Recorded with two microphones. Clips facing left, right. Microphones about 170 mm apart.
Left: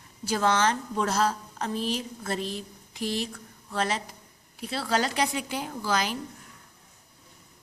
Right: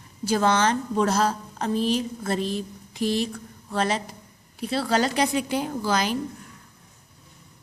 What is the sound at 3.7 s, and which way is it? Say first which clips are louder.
A woman's voice: right 4 dB; 30° right (ahead or behind).